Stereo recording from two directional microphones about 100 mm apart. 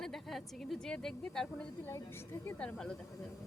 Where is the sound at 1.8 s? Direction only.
25° left (ahead or behind).